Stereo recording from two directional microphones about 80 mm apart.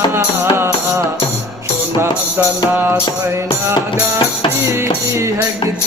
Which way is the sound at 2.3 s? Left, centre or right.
Right.